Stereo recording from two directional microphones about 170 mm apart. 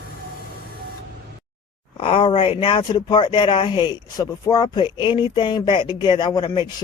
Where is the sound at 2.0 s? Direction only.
30° left (ahead or behind).